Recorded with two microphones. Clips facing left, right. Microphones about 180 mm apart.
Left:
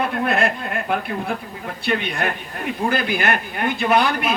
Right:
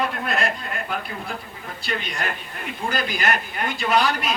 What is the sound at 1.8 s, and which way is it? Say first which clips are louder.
A man's voice: left 6 dB; 60° left (ahead or behind).